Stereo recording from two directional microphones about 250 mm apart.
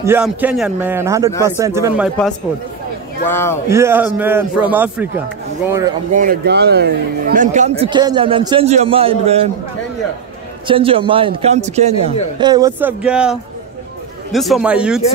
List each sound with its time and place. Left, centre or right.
0.0 s a man's voice: centre
3.3 s speech: centre
3.6 s a man's voice: centre
6.1 s a man's voice: right
10.7 s a man's voice: right
12.4 s a man's voice: centre
13.0 s a man's voice: centre